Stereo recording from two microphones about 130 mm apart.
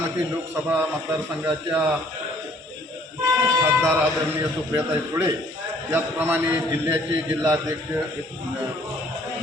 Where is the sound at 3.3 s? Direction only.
30° right (ahead or behind).